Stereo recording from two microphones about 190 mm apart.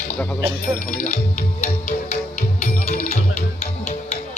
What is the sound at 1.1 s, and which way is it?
Music, 35° left (ahead or behind).